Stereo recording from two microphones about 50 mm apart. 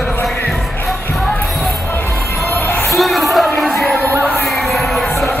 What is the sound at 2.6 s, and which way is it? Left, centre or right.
Music, left.